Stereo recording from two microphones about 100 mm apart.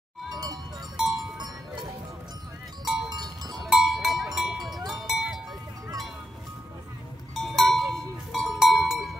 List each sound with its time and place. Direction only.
0.3 s music: 40° right (ahead or behind)
0.9 s sheep: centre (ahead or behind)
2.8 s sheep: centre (ahead or behind)
3.1 s sheep: 45° right (ahead or behind)
3.6 s cowbell: 5° right (ahead or behind)
7.3 s cowbell: centre (ahead or behind)
7.9 s a sound: centre (ahead or behind)